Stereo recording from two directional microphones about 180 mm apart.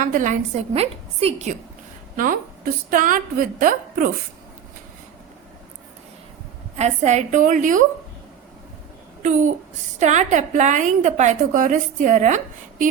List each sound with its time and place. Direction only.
0.0 s a woman's voice: 45° right (ahead or behind)
2.9 s a woman's voice: 50° right (ahead or behind)
6.7 s a woman's voice: 40° right (ahead or behind)
9.2 s a woman's voice: 45° right (ahead or behind)